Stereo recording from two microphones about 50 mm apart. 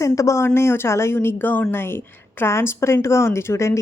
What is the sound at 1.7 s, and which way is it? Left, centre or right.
Speech, left.